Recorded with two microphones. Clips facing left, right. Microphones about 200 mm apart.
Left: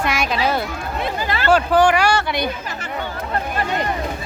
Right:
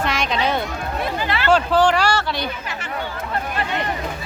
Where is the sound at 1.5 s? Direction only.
10° left (ahead or behind).